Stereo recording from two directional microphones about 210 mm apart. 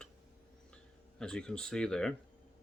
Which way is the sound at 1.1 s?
5° left (ahead or behind).